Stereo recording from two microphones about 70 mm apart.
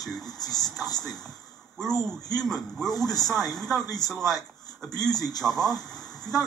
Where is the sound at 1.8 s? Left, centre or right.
Centre.